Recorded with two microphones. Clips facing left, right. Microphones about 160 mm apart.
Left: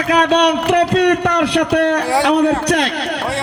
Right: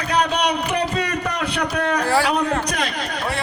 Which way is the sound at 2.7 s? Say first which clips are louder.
Left 8 dB; 85° left.